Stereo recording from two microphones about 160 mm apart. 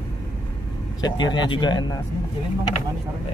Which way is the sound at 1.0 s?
30° left (ahead or behind).